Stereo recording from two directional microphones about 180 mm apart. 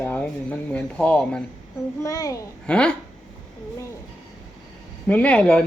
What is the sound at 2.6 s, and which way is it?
Speech, 5° left (ahead or behind).